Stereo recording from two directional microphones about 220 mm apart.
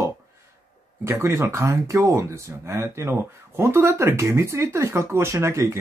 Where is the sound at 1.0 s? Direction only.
10° right (ahead or behind).